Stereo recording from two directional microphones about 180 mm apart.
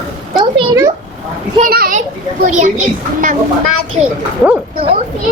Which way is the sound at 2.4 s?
45° right (ahead or behind).